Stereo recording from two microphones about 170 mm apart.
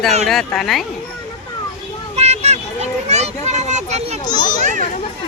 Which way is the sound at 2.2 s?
40° right (ahead or behind).